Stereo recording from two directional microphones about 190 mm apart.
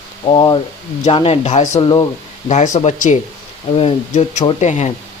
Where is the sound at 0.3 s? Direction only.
25° left (ahead or behind).